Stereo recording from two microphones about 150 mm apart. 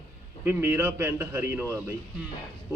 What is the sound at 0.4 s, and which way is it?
Speech, 15° right (ahead or behind).